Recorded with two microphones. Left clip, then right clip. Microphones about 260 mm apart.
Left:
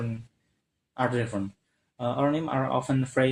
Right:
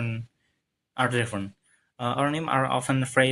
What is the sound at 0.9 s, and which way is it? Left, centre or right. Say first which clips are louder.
Speech: right 2 dB; right.